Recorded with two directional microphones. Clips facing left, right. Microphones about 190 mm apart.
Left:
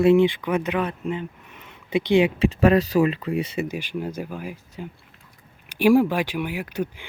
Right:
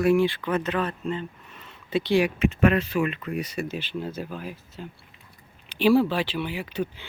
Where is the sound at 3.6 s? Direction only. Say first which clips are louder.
Left 3 dB; 10° left (ahead or behind).